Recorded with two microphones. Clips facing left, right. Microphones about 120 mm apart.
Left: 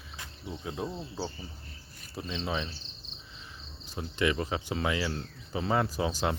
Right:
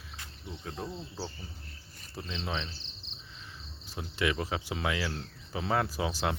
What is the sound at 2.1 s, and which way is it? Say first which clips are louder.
Speech: left 3 dB; centre (ahead or behind).